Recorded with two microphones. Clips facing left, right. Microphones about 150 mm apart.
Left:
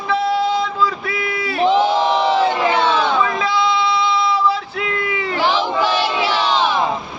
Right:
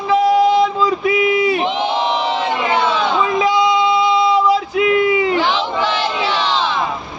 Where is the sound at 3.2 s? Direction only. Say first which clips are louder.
Right 3 dB; 15° right (ahead or behind).